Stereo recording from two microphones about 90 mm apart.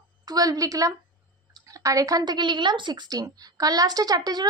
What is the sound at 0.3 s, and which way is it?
A woman's voice, 45° right (ahead or behind).